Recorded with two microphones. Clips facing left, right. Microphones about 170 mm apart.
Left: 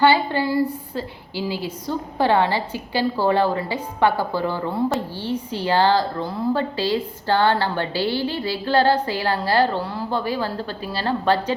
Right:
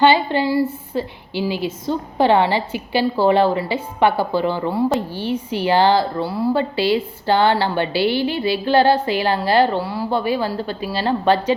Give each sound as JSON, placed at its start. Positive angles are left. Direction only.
{"t": 0.0, "sound": "a woman's voice", "side_deg": -20}